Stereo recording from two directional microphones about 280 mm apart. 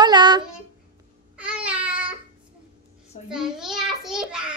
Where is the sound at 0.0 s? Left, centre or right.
Centre.